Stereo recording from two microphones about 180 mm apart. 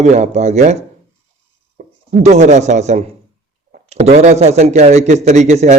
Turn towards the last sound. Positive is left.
turn(degrees=-40)  # may be behind; listen again after turning